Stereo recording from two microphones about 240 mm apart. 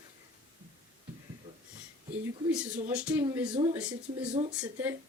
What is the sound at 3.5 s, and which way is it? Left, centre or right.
Speech, centre.